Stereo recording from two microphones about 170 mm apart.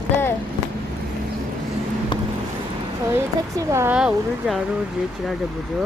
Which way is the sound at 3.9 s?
5° right (ahead or behind).